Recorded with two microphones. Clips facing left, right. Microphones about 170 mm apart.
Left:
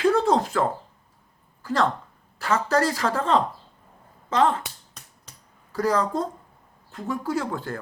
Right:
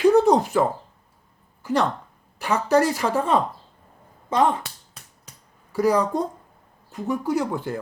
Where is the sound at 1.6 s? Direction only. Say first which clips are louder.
Right 2 dB; 15° right (ahead or behind).